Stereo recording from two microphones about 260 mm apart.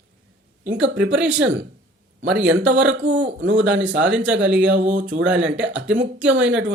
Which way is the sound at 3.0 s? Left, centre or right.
Right.